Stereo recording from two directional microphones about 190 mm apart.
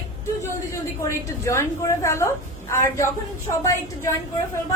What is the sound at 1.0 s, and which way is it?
A woman's voice, 15° left (ahead or behind).